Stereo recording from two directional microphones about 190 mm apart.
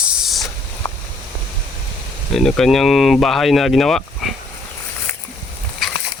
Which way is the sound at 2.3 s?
Centre (ahead or behind).